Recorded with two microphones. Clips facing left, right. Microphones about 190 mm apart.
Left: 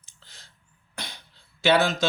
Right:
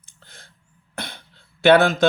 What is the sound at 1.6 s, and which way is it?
Speech, 55° right (ahead or behind).